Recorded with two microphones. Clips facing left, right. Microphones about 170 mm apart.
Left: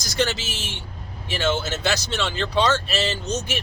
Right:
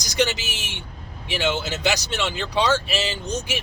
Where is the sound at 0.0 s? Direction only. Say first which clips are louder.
Right 1 dB; 15° right (ahead or behind).